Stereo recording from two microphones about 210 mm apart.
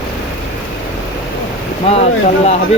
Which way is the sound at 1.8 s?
30° left (ahead or behind).